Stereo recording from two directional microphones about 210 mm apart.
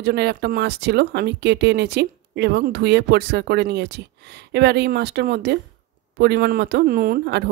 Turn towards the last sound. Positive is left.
turn(degrees=-50)  # may be behind; listen again after turning